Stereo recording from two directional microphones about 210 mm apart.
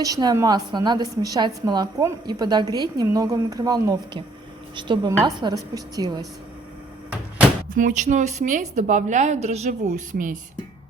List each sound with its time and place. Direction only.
0.0 s a woman's voice: 15° right (ahead or behind)
7.7 s a woman's voice: 40° right (ahead or behind)